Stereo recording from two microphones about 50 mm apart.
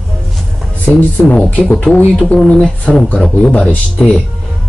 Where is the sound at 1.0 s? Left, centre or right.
Left.